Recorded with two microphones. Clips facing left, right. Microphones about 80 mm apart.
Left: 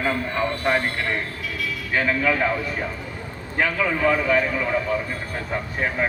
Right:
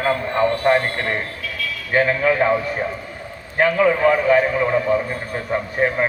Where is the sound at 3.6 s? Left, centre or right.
Right.